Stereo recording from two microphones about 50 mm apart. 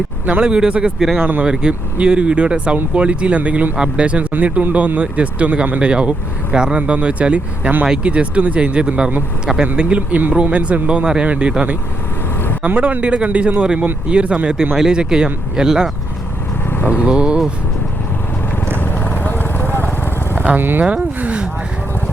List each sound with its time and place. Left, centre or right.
0.3 s speech: right
0.9 s speech: centre
1.2 s a man's voice: right
1.5 s a man's voice: centre
16.6 s vehicle: left
17.1 s speech: centre
18.8 s vehicle: left
20.3 s vehicle: right
20.6 s speech: right
21.2 s speech: right